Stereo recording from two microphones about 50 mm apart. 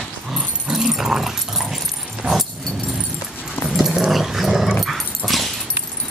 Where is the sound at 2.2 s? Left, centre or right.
Right.